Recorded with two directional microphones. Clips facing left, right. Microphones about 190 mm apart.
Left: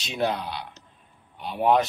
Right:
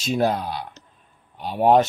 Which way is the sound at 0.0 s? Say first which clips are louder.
Right 5 dB; 45° right (ahead or behind).